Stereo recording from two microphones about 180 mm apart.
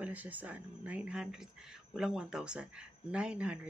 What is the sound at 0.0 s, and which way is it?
Speech, 10° right (ahead or behind).